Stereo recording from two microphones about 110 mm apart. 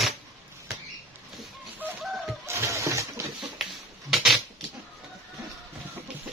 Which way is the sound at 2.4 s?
25° right (ahead or behind).